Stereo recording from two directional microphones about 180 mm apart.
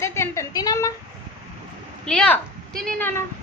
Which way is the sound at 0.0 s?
15° left (ahead or behind).